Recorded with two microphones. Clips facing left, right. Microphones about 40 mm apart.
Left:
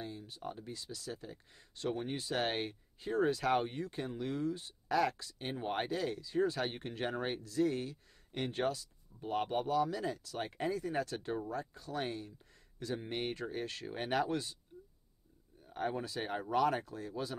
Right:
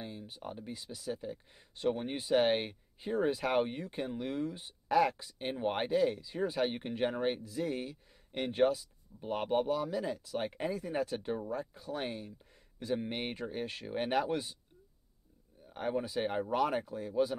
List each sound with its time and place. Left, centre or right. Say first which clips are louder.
0.0 s speech: even; centre
15.7 s speech: right 3 dB; centre